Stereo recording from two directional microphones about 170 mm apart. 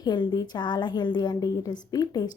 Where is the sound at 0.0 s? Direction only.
25° left (ahead or behind).